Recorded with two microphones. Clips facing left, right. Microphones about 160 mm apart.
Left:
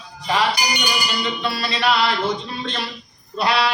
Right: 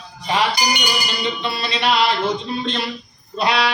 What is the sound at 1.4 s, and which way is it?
Speech, 20° right (ahead or behind).